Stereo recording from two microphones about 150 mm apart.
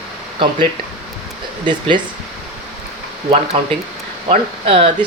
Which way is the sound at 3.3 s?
45° right (ahead or behind).